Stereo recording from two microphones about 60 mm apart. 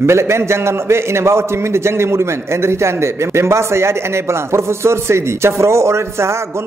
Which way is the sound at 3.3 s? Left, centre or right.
Right.